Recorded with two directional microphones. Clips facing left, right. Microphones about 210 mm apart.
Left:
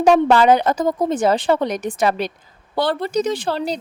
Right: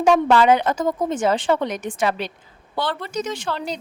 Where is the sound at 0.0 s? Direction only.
40° left (ahead or behind).